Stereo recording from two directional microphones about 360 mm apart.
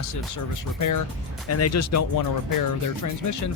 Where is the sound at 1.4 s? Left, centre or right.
Left.